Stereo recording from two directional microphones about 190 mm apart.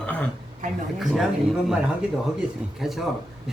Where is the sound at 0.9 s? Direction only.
Centre (ahead or behind).